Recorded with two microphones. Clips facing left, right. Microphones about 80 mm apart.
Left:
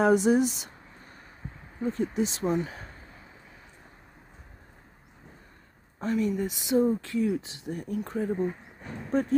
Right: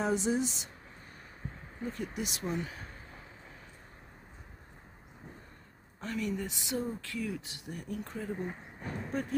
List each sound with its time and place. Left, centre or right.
0.0 s speech: left
1.8 s speech: left
5.9 s speech: left
8.5 s speech: centre